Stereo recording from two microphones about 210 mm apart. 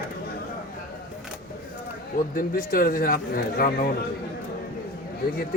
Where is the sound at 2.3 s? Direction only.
45° left (ahead or behind).